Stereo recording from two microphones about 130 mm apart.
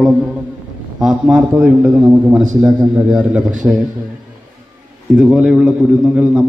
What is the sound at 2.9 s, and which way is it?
Speech, 10° right (ahead or behind).